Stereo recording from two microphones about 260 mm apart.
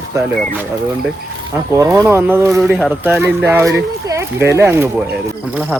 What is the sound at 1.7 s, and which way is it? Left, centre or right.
Speech, centre.